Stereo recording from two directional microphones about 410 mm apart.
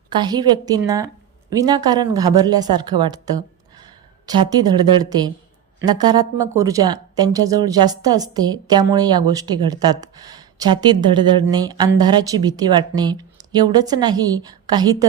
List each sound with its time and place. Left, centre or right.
0.2 s speech: centre